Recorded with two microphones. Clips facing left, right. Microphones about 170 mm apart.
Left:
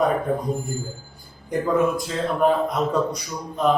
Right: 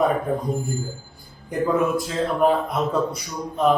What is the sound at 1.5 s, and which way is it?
A man's voice, centre (ahead or behind).